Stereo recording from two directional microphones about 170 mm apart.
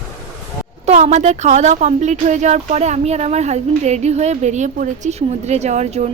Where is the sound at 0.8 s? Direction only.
40° right (ahead or behind).